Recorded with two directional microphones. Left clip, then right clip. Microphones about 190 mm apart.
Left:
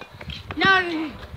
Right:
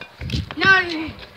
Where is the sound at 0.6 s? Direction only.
15° right (ahead or behind).